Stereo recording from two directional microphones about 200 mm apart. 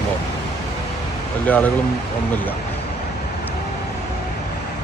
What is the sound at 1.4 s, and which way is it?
Speech, 10° left (ahead or behind).